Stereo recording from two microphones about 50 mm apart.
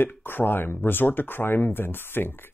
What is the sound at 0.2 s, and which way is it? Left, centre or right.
Speech, left.